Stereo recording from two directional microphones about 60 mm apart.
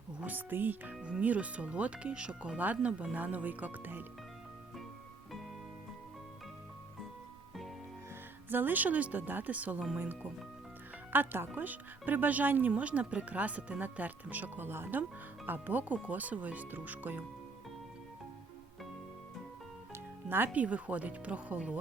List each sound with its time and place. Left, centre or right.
0.2 s speech: right
8.4 s speech: right
11.1 s speech: right
20.2 s speech: right
20.5 s speech: right